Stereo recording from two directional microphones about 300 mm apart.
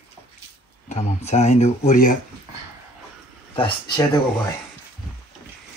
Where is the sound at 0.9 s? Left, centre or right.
Left.